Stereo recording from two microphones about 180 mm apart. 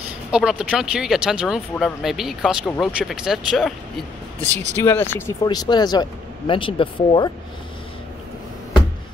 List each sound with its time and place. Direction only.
0.3 s speech: 5° right (ahead or behind)
4.7 s speech: 10° left (ahead or behind); by 7.2 s 30° left (ahead or behind)